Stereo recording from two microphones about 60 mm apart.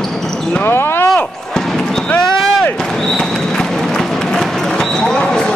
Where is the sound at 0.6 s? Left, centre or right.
Left.